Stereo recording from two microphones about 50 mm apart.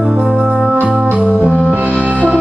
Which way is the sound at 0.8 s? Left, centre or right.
Right.